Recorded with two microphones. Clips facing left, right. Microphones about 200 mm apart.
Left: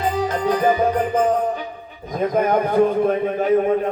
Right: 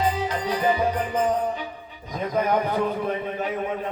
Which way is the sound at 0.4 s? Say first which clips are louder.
Left 5 dB; 45° left (ahead or behind).